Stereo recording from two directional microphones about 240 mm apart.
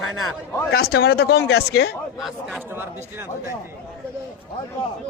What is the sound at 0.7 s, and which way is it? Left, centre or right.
A man's voice, left.